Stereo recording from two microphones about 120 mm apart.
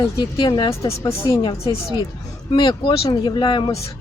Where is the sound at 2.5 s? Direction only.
40° left (ahead or behind).